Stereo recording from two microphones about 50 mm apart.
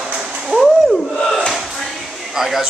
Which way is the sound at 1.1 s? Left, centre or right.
Centre.